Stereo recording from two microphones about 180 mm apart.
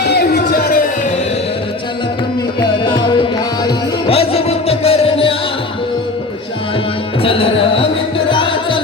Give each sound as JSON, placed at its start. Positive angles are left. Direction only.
{"t": 2.6, "sound": "music", "side_deg": 25}
{"t": 7.2, "sound": "carnatic music", "side_deg": 30}
{"t": 8.3, "sound": "music", "side_deg": 30}